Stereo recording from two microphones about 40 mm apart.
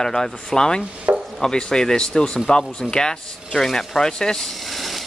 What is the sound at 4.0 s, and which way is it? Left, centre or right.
Speech, centre.